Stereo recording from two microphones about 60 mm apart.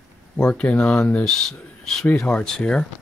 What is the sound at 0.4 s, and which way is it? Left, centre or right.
Speech, left.